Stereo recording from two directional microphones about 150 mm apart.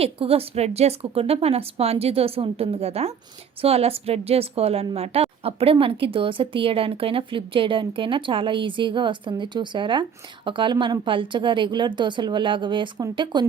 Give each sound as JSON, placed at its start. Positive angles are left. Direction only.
{"t": 0.0, "sound": "a woman's voice", "side_deg": -40}